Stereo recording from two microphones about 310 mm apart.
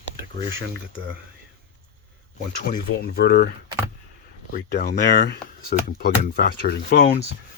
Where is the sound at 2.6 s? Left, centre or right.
Left.